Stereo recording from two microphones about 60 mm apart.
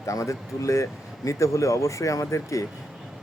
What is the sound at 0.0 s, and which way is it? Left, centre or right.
Speech, left.